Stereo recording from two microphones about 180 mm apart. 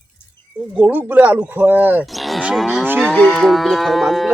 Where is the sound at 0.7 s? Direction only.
10° right (ahead or behind).